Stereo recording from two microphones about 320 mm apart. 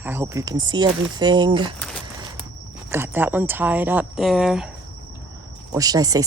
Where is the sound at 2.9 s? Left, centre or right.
Centre.